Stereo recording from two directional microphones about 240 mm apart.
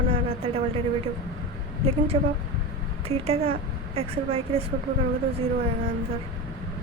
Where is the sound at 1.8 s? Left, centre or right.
Right.